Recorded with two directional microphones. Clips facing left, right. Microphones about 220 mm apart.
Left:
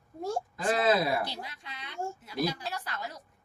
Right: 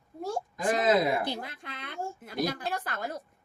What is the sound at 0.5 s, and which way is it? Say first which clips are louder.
Speech: right 2 dB; 20° right (ahead or behind).